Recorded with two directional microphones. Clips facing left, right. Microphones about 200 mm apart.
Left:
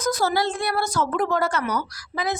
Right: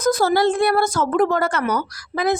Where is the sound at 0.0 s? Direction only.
50° right (ahead or behind).